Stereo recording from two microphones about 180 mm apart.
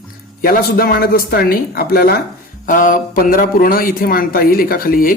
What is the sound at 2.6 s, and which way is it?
A man's voice, 45° left (ahead or behind).